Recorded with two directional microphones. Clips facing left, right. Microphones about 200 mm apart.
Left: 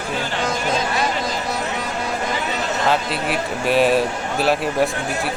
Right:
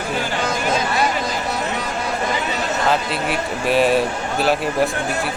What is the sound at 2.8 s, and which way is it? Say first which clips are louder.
Speech: even; centre (ahead or behind).